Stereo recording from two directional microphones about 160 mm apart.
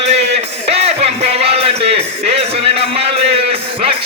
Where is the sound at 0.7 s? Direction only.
40° right (ahead or behind).